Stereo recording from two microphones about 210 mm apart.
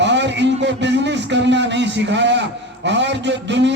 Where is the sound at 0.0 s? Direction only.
55° right (ahead or behind).